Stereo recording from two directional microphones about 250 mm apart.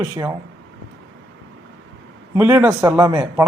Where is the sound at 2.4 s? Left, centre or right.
Centre.